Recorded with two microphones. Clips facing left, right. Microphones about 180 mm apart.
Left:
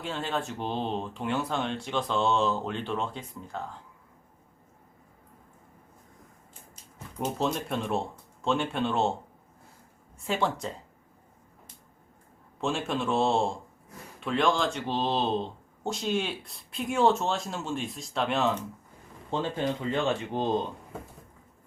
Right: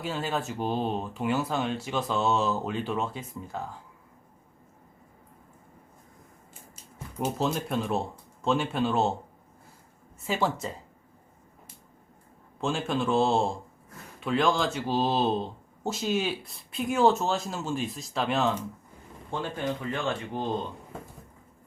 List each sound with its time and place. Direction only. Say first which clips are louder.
0.0 s speech: right 1 dB; 5° right (ahead or behind)
7.2 s speech: right 1 dB; 5° right (ahead or behind)
10.2 s speech: right 1 dB; centre (ahead or behind)
12.5 s speech: right 1 dB; centre (ahead or behind)
19.3 s speech: left 2 dB; 20° left (ahead or behind)